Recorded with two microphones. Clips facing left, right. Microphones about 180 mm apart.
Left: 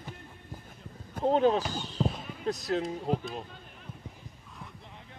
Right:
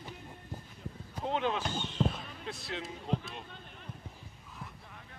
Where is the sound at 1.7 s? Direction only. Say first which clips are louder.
Left 1 dB; 35° left (ahead or behind).